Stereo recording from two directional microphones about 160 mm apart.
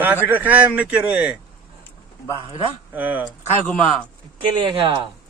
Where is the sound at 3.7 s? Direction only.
5° left (ahead or behind).